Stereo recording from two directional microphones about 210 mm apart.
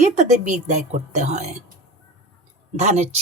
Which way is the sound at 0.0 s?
35° right (ahead or behind).